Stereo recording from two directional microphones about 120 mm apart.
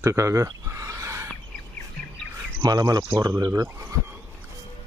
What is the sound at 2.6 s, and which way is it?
Speech, 30° right (ahead or behind).